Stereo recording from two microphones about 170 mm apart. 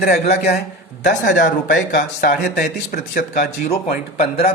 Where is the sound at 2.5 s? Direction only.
60° left (ahead or behind).